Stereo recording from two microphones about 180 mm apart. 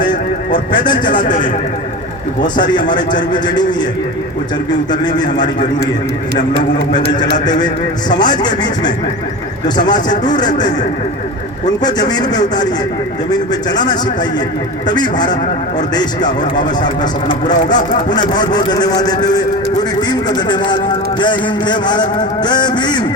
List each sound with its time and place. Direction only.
0.0 s a sound: 25° left (ahead or behind)
1.0 s speech: 45° left (ahead or behind)
2.4 s a man's voice: 25° left (ahead or behind)
6.9 s a man's voice: 25° left (ahead or behind)
10.3 s a man's voice: 25° left (ahead or behind)
11.8 s a man's voice: 20° left (ahead or behind)